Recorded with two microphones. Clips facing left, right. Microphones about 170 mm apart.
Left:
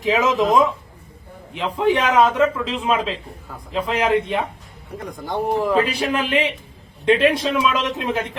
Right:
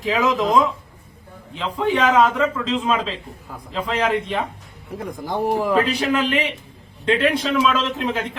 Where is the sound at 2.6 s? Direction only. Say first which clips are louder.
Even; 10° left (ahead or behind).